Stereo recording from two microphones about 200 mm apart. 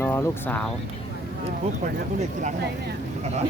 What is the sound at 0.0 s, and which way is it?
Speech, 10° left (ahead or behind).